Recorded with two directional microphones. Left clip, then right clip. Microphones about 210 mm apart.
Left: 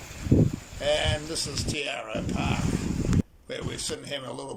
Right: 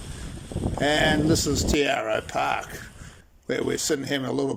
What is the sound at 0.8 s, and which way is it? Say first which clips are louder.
A man's voice: right 5 dB; 40° right (ahead or behind).